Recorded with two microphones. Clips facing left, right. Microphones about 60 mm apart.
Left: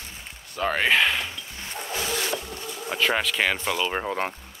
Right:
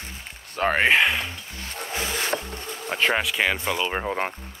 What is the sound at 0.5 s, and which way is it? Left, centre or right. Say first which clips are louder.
Speech: right 3 dB; right.